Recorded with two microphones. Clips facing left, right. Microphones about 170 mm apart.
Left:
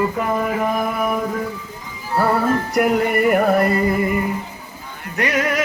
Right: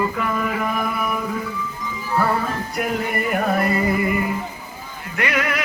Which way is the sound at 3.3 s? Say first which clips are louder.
Left 5 dB; 50° left (ahead or behind).